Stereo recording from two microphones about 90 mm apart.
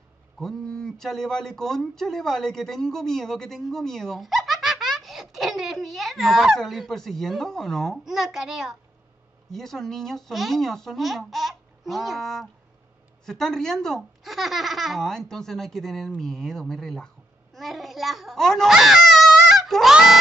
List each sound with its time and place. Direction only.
0.4 s a child's voice: 5° left (ahead or behind)